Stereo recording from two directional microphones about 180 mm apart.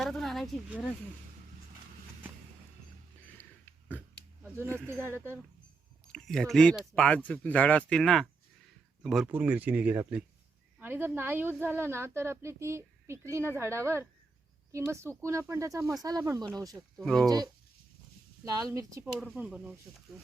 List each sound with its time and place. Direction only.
0.0 s speech: centre (ahead or behind)
4.4 s a woman's voice: 15° right (ahead or behind)
6.1 s a woman's voice: 5° left (ahead or behind); by 16.5 s 20° right (ahead or behind)
17.0 s speech: centre (ahead or behind)
17.2 s speech: 20° right (ahead or behind)
19.2 s speech: 5° right (ahead or behind)